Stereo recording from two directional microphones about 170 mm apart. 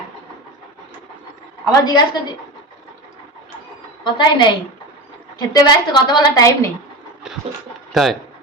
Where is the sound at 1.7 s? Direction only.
25° left (ahead or behind).